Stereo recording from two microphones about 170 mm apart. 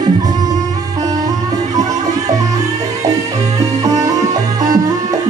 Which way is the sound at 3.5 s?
20° right (ahead or behind).